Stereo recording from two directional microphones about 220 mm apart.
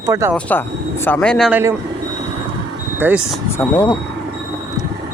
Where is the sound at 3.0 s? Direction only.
10° right (ahead or behind).